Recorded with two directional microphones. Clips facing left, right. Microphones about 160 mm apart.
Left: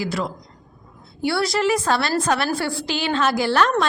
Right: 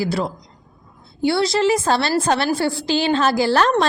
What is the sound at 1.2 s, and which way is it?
A woman's voice, 25° right (ahead or behind).